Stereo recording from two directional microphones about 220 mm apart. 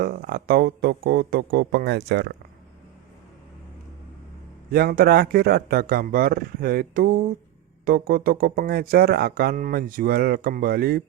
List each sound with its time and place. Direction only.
0.0 s speech: 45° right (ahead or behind)
4.7 s speech: 45° right (ahead or behind)